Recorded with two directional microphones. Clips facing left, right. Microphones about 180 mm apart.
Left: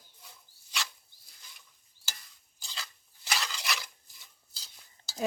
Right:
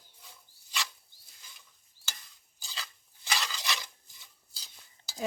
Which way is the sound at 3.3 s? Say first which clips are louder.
Even; 5° left (ahead or behind).